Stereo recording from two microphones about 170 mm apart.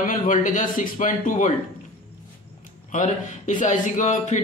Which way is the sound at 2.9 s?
45° left (ahead or behind).